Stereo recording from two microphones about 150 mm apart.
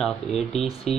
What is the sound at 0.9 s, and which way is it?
Music, 45° left (ahead or behind).